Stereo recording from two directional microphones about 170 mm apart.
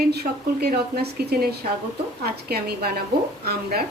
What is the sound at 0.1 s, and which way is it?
A woman's voice, 70° right (ahead or behind).